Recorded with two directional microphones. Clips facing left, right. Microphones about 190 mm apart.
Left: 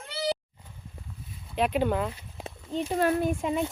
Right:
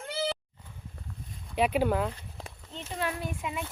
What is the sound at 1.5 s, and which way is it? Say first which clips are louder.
Speech: even; 10° right (ahead or behind).